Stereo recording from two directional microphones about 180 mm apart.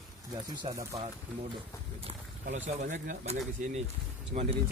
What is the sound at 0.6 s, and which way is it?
Speech, 20° right (ahead or behind).